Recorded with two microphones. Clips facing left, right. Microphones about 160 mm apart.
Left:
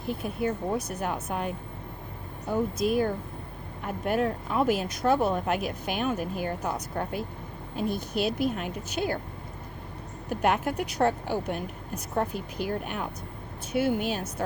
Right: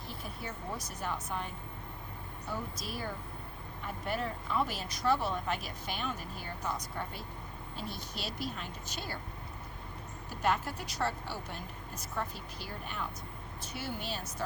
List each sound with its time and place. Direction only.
0.0 s speech: 55° left (ahead or behind)
10.2 s speech: 60° left (ahead or behind)